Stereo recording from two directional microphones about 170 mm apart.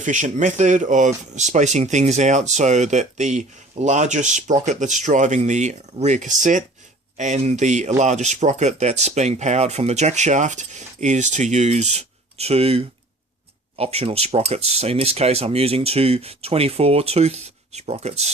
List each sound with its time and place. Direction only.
0.0 s speech: 45° right (ahead or behind)